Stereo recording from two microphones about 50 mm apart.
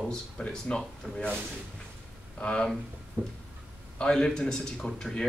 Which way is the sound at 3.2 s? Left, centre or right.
Right.